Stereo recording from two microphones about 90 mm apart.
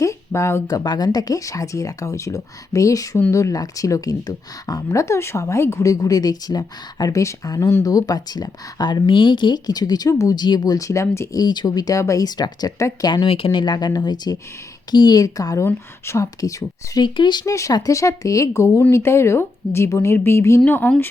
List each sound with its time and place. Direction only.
0.0 s a sound: 35° left (ahead or behind)
0.7 s speech: 45° left (ahead or behind)
10.4 s speech: 50° left (ahead or behind); by 11.3 s 30° left (ahead or behind)
11.3 s speech: 50° left (ahead or behind)
13.2 s speech: 90° left; by 17.0 s 40° left (ahead or behind)
17.0 s speech: 55° left (ahead or behind)
17.4 s a woman's voice: 35° left (ahead or behind)